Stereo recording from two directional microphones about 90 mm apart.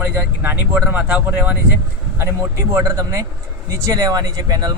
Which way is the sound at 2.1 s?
30° right (ahead or behind).